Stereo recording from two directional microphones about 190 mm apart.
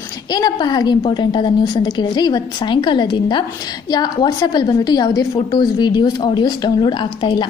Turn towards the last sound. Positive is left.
turn(degrees=25)  # may be behind; listen again after turning